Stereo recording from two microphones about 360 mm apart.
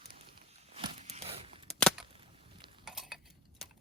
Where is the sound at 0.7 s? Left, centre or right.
Centre.